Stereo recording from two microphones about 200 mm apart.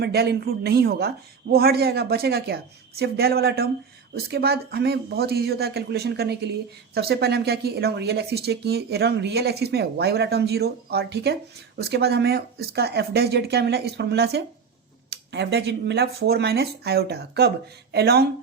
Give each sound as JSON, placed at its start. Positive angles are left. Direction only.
{"t": 0.0, "sound": "speech", "side_deg": -55}